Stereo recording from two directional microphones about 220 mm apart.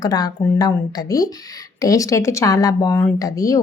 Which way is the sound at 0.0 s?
15° left (ahead or behind).